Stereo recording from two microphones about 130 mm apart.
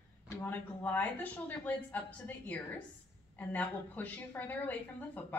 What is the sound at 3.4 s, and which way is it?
A woman's voice, 15° left (ahead or behind).